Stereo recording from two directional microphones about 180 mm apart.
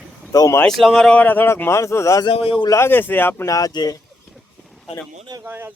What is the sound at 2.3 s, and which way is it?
Speech, 30° left (ahead or behind).